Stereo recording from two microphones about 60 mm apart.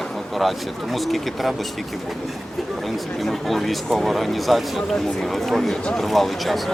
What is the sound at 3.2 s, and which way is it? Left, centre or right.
Speech, centre.